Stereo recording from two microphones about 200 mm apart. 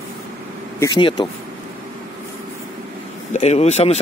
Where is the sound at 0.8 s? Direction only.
20° left (ahead or behind).